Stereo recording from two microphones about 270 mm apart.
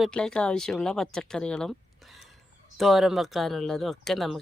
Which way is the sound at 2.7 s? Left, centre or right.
Centre.